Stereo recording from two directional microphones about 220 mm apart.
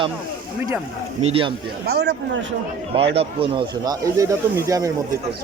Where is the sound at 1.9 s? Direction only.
50° right (ahead or behind).